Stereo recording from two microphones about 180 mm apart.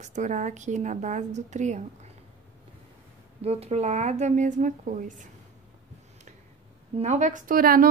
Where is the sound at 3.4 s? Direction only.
35° right (ahead or behind).